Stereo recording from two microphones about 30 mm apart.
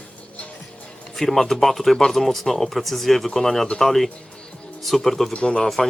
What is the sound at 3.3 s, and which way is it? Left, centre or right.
Speech, centre.